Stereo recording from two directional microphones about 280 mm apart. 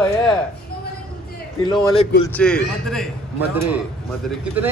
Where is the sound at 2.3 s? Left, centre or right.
Centre.